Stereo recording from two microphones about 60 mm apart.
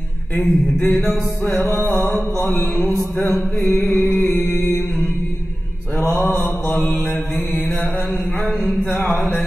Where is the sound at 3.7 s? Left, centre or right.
Left.